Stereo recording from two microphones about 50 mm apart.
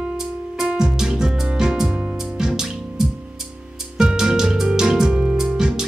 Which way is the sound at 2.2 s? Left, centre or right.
Centre.